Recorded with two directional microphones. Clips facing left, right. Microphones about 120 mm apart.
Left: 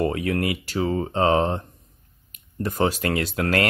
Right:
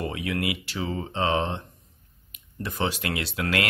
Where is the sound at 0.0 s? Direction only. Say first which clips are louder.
Left 6 dB; 45° left (ahead or behind).